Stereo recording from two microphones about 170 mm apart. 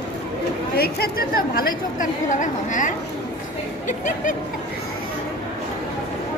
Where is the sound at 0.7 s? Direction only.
65° left (ahead or behind); by 2.9 s 45° left (ahead or behind).